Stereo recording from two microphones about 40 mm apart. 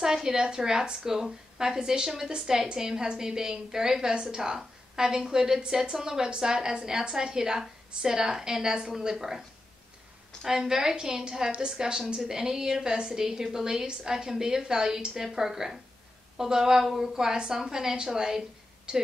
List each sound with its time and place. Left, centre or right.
0.0 s a woman's voice: centre
10.4 s a woman's voice: centre